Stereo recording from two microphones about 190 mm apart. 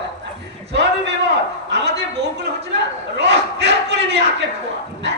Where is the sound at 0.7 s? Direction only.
65° right (ahead or behind).